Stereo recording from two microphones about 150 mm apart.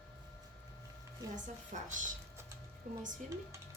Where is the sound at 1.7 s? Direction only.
55° right (ahead or behind).